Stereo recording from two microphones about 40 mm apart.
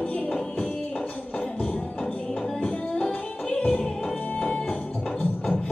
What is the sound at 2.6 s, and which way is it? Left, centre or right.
Music, left.